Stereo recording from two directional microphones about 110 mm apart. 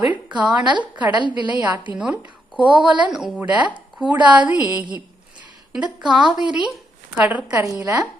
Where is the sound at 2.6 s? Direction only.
45° right (ahead or behind).